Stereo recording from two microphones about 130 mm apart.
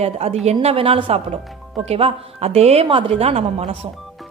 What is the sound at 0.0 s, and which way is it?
Speech, 55° right (ahead or behind).